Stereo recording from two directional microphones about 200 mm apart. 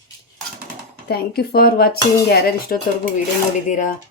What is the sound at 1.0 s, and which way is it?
Speech, 50° left (ahead or behind).